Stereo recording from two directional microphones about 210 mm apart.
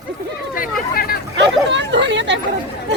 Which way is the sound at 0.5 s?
45° left (ahead or behind).